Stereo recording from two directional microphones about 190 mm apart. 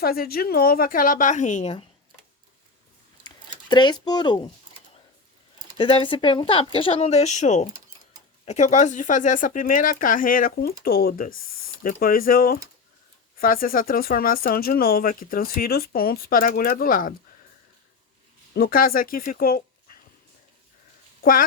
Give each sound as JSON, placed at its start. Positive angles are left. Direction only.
{"t": 0.0, "sound": "speech", "side_deg": 55}
{"t": 3.2, "sound": "a sound", "side_deg": 25}
{"t": 5.7, "sound": "speech", "side_deg": 25}
{"t": 18.5, "sound": "speech", "side_deg": 50}